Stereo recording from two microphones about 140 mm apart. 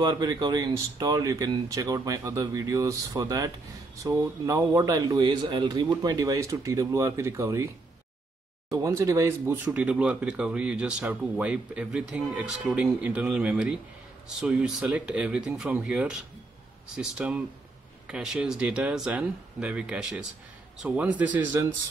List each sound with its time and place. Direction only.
0.0 s speech: 30° right (ahead or behind)
9.7 s speech: 10° right (ahead or behind)